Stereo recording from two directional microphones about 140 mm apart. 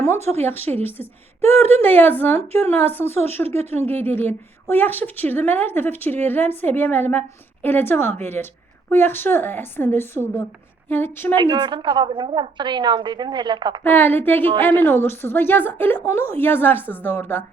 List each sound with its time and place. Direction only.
0.2 s speech: 50° right (ahead or behind)
0.4 s a woman's voice: 15° left (ahead or behind)
3.6 s speech: 50° right (ahead or behind)
3.8 s a woman's voice: 15° left (ahead or behind)
11.5 s a woman's voice: 30° right (ahead or behind)
13.8 s a woman's voice: 15° left (ahead or behind)